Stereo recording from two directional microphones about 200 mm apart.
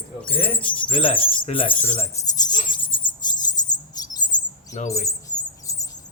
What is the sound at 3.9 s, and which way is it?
Chirp, 20° left (ahead or behind).